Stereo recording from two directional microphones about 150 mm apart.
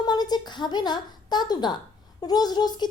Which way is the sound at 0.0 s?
25° left (ahead or behind).